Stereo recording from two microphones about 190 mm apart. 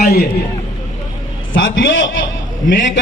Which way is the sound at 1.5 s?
80° left.